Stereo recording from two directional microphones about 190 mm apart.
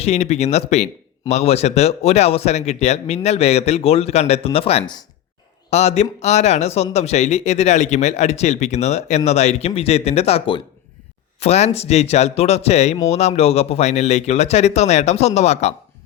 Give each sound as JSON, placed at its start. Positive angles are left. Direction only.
{"t": 0.0, "sound": "speech", "side_deg": 35}